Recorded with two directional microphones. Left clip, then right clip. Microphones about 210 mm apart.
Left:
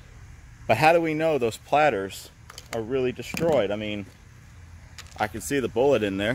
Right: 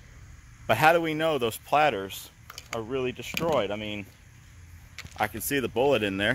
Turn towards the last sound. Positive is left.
turn(degrees=-5)  # may be behind; listen again after turning